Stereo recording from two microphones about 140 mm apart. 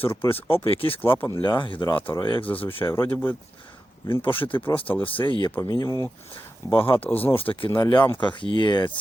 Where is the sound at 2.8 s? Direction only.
15° left (ahead or behind).